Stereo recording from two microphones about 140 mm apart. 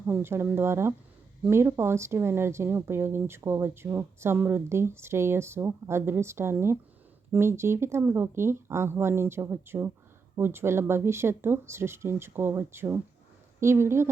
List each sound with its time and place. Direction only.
0.1 s speech: 15° right (ahead or behind)